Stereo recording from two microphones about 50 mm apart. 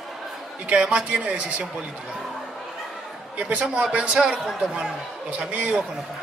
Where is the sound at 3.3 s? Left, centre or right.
Right.